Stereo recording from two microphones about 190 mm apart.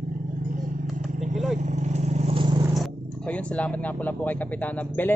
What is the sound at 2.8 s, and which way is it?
Speech, 5° left (ahead or behind).